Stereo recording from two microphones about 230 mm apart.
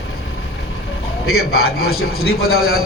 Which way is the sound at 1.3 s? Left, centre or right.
Left.